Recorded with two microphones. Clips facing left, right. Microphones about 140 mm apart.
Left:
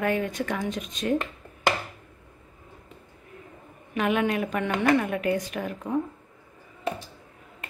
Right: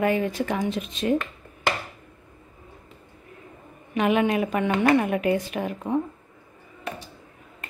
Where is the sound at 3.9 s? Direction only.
5° right (ahead or behind).